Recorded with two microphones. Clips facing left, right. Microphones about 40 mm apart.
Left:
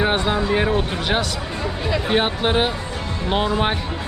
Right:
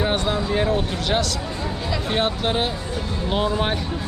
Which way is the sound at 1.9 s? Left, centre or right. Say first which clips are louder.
Left 3 dB; left.